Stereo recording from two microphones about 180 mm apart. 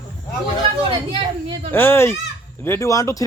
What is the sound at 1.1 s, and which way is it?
Speech, 30° right (ahead or behind).